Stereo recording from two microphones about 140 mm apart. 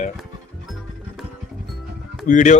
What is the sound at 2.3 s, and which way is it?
Speech, 65° left (ahead or behind).